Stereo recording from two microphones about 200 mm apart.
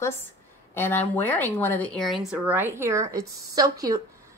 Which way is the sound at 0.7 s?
10° left (ahead or behind).